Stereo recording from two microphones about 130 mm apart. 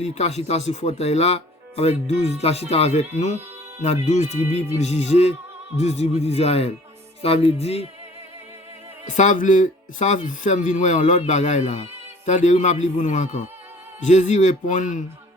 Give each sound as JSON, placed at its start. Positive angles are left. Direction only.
{"t": 0.0, "sound": "a man's voice", "side_deg": 55}
{"t": 9.0, "sound": "a man's voice", "side_deg": 70}